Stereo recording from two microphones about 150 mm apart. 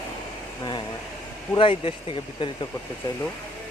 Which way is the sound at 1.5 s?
35° left (ahead or behind).